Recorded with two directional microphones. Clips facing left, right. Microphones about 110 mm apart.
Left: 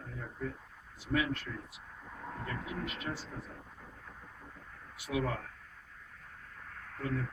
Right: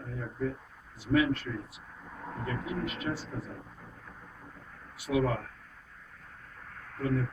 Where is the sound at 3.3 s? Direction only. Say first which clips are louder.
Right 6 dB; 30° right (ahead or behind).